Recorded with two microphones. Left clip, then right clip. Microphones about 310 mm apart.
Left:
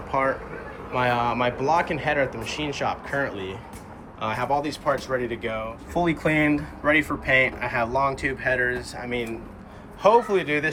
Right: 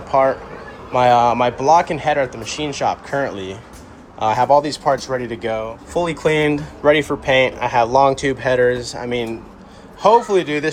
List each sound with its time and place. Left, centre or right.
0.1 s speech: centre
10.0 s a man's voice: centre